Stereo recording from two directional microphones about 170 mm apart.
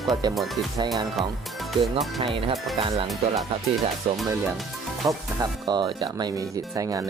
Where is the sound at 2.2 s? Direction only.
30° right (ahead or behind).